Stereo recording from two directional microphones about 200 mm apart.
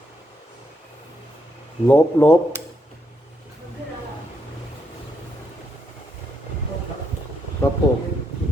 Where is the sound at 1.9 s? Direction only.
10° left (ahead or behind).